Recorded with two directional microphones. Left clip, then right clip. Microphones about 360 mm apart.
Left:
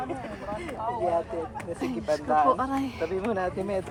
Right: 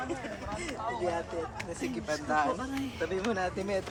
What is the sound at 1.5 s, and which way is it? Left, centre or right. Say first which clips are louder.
Speech: left 4 dB; centre.